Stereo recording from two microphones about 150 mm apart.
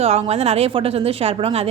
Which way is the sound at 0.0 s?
45° right (ahead or behind).